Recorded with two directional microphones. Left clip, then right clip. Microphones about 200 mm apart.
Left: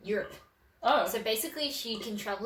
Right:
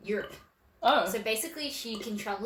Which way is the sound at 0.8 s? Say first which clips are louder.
Right 2 dB; 40° right (ahead or behind).